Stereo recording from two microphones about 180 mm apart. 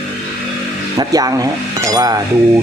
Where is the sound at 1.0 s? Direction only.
20° right (ahead or behind).